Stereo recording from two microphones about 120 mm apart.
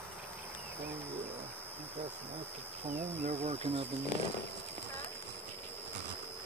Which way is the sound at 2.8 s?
60° right (ahead or behind).